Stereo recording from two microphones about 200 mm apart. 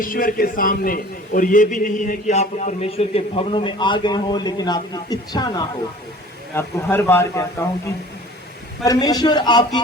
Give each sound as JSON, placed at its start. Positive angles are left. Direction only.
{"t": 0.0, "sound": "a man's voice", "side_deg": 45}
{"t": 8.8, "sound": "a man's voice", "side_deg": 20}